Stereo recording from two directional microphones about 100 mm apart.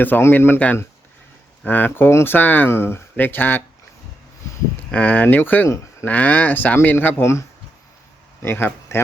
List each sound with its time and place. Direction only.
0.0 s speech: 20° left (ahead or behind)
4.9 s speech: 15° left (ahead or behind)
5.6 s speech: 30° left (ahead or behind)
6.1 s speech: 15° left (ahead or behind)